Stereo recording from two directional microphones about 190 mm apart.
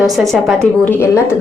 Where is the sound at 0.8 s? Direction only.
15° left (ahead or behind).